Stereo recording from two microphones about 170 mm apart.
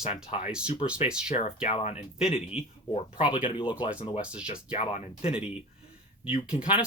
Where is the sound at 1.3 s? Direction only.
40° left (ahead or behind).